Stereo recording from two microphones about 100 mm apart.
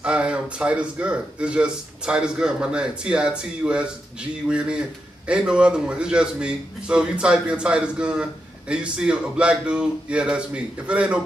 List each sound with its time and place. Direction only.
0.0 s a man's voice: 10° right (ahead or behind)